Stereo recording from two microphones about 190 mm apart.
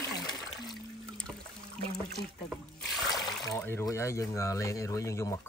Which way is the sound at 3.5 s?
10° left (ahead or behind).